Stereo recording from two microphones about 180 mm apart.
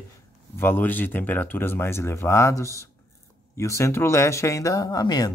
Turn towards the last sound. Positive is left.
turn(degrees=20)  # may be behind; listen again after turning